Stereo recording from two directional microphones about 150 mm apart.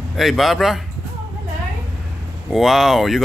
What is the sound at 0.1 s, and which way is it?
Speech, centre (ahead or behind).